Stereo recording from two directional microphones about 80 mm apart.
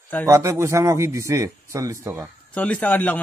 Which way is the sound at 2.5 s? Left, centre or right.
Centre.